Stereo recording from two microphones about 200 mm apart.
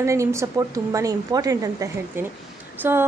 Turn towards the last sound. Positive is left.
turn(degrees=-10)  # may be behind; listen again after turning